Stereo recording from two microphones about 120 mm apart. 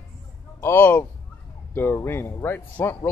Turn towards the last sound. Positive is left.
turn(degrees=15)  # may be behind; listen again after turning